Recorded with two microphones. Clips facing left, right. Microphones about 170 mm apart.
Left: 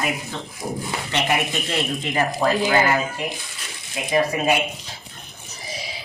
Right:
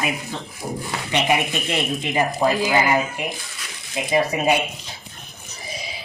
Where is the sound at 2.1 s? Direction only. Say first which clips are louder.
Right 1 dB; 15° right (ahead or behind).